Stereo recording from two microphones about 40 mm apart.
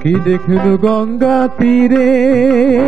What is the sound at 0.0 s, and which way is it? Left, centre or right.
Music, centre.